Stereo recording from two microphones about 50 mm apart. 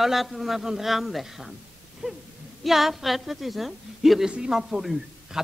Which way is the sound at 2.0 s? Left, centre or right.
Right.